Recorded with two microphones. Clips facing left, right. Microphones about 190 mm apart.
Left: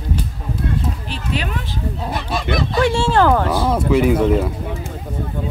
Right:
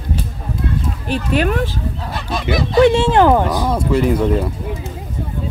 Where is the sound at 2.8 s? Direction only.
20° right (ahead or behind).